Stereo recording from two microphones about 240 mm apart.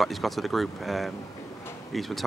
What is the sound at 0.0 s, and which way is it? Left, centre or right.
Speech, centre.